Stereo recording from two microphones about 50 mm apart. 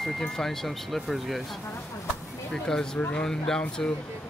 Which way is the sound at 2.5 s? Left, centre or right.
Centre.